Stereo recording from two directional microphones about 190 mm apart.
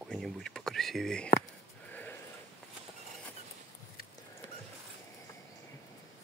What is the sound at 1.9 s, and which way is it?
Sheep, 10° left (ahead or behind).